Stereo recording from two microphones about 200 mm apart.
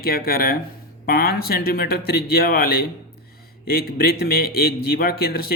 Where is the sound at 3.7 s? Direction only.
50° left (ahead or behind).